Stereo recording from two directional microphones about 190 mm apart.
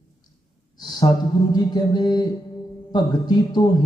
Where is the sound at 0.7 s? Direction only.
20° left (ahead or behind).